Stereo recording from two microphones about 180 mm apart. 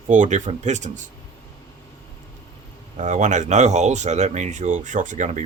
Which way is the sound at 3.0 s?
45° right (ahead or behind).